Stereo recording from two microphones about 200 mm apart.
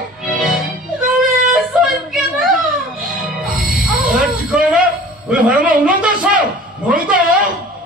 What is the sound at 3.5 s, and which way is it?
Music, 45° right (ahead or behind).